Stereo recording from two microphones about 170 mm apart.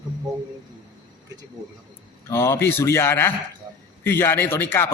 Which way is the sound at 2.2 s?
15° left (ahead or behind).